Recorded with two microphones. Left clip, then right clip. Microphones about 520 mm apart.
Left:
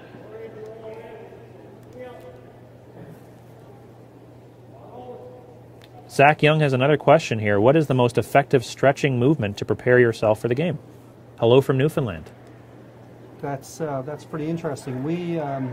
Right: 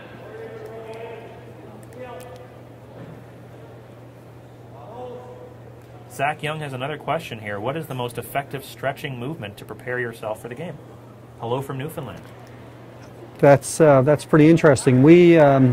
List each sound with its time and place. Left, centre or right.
6.1 s speech: left
13.4 s speech: right